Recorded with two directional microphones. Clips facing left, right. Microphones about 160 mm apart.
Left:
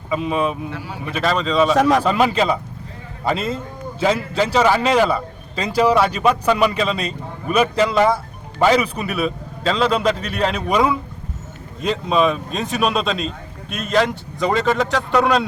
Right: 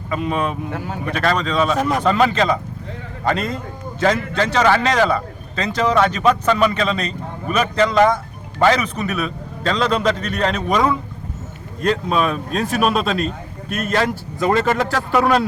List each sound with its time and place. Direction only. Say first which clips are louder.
0.1 s speech: left 1 dB; 5° left (ahead or behind)
1.7 s speech: left 4 dB; 90° left
2.0 s speech: right 1 dB; 5° left (ahead or behind)